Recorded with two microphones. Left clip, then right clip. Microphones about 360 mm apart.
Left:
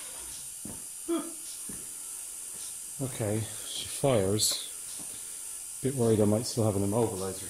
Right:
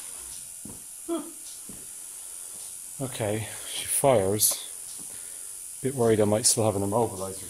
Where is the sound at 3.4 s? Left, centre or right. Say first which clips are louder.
Right 2 dB; right.